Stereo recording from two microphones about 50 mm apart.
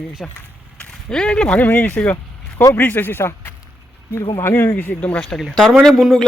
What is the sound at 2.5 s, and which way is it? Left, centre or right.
Speech, left.